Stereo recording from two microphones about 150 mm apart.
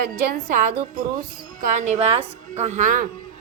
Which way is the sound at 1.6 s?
55° right (ahead or behind).